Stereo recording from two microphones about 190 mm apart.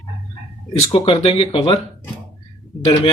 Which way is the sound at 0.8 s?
30° left (ahead or behind).